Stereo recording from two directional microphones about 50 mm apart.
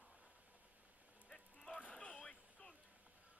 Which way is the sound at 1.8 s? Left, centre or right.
Left.